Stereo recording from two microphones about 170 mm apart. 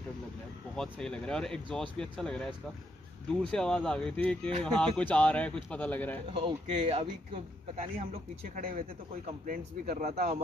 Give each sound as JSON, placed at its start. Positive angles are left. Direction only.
{"t": 0.7, "sound": "speech", "side_deg": 5}
{"t": 6.3, "sound": "speech", "side_deg": -35}
{"t": 8.5, "sound": "a man's voice", "side_deg": -55}